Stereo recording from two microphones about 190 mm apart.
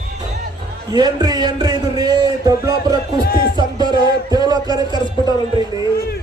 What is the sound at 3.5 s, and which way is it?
Music, 20° right (ahead or behind).